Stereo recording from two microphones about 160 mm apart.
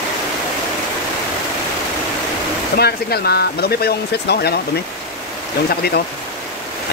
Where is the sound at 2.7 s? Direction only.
80° left.